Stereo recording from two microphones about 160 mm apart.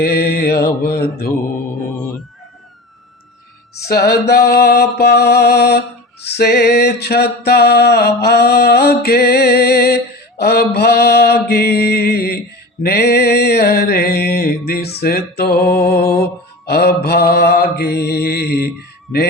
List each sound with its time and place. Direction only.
0.0 s music: 80° left
0.8 s mantra: 75° left (ahead or behind)
3.8 s music: 80° left
12.8 s mantra: 85° left
14.7 s music: 75° left (ahead or behind)
16.6 s mantra: 80° left